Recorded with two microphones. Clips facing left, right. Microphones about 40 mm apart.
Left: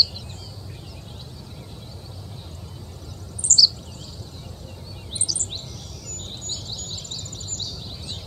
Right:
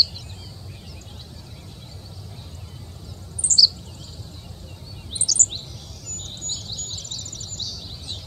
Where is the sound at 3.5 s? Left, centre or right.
Centre.